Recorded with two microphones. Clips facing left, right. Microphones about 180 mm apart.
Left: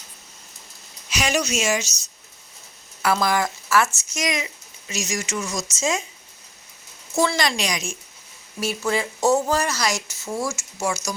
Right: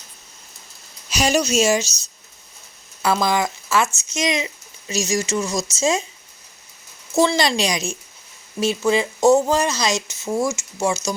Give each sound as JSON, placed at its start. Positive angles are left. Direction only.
{"t": 1.1, "sound": "speech", "side_deg": -35}
{"t": 7.2, "sound": "speech", "side_deg": -30}
{"t": 8.6, "sound": "speech", "side_deg": -20}